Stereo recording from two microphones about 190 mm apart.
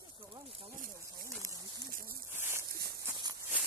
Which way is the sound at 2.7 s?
55° right (ahead or behind).